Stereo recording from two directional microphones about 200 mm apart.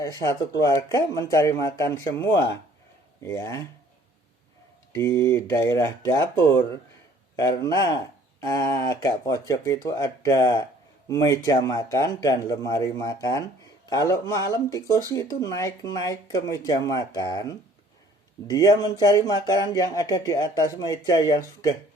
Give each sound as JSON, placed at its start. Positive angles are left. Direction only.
{"t": 0.0, "sound": "speech", "side_deg": 15}
{"t": 4.9, "sound": "speech", "side_deg": 15}